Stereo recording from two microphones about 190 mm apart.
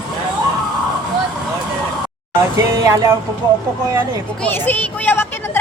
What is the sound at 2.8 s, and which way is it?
Speech, 15° right (ahead or behind).